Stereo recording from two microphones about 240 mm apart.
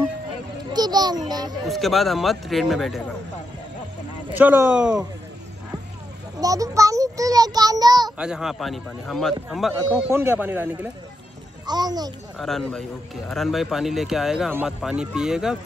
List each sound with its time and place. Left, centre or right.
0.7 s children playing: centre
1.3 s speech: centre
1.7 s a man's voice: centre
4.3 s speech: centre
6.4 s a child's voice: centre
8.2 s a man's voice: centre
12.4 s a man's voice: centre